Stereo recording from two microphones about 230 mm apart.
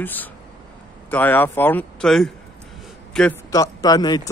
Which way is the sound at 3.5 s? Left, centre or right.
Centre.